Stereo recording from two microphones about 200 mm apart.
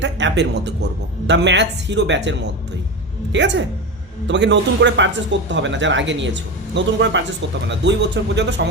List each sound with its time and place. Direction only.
0.0 s speech: 65° right (ahead or behind)
3.3 s speech: 65° right (ahead or behind)